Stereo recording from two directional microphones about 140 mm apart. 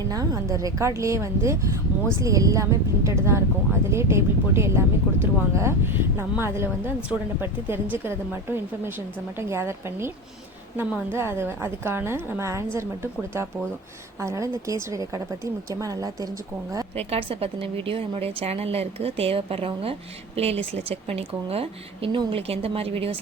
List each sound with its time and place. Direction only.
0.1 s speech: 25° right (ahead or behind)
17.0 s a woman's voice: 45° right (ahead or behind)